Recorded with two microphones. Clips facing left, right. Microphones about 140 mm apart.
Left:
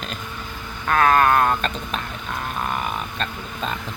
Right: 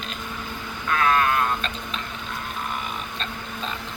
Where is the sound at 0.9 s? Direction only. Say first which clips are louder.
Left 5 dB; 50° left (ahead or behind).